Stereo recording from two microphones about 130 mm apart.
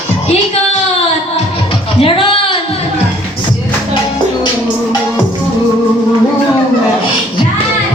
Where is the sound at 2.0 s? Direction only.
45° left (ahead or behind).